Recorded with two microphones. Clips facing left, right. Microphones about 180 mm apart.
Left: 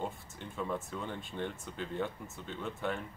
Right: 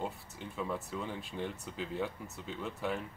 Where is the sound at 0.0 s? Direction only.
Centre (ahead or behind).